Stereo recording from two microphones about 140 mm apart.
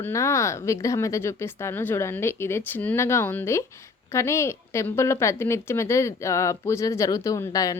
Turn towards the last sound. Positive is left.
turn(degrees=25)  # may be behind; listen again after turning